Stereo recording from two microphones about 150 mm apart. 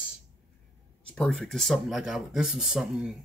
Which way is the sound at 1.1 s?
Centre (ahead or behind).